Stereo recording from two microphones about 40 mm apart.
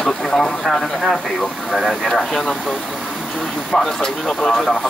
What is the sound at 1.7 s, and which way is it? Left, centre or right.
Speech, centre.